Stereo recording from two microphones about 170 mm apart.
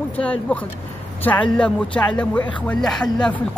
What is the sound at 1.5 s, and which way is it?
Speech, 5° left (ahead or behind).